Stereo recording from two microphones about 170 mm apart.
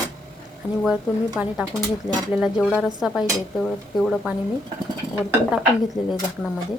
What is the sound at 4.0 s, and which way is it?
Speech, centre (ahead or behind).